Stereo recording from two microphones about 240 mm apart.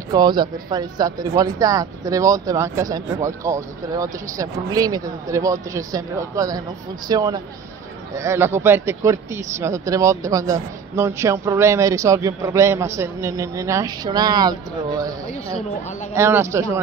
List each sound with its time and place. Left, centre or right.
0.1 s speech: centre